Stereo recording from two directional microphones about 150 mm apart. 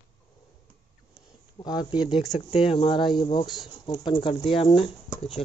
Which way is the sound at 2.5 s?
40° left (ahead or behind).